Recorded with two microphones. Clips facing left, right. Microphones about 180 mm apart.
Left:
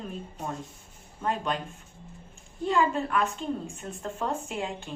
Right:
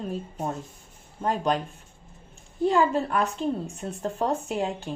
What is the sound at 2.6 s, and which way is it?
A woman's voice, 40° right (ahead or behind).